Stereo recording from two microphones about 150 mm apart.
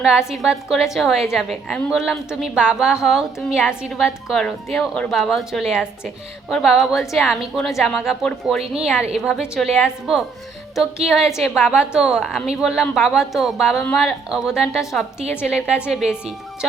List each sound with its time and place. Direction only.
0.0 s a woman's voice: 5° right (ahead or behind)